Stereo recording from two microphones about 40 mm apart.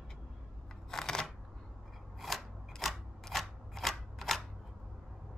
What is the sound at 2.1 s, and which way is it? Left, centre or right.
Scissors, centre.